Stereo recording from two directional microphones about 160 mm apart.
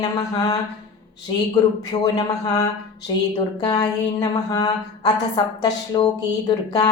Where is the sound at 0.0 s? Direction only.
25° left (ahead or behind).